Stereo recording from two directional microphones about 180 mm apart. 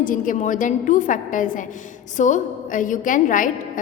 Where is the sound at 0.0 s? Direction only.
50° left (ahead or behind).